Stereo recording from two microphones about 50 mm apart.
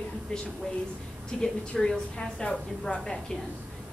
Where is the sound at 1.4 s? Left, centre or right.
Centre.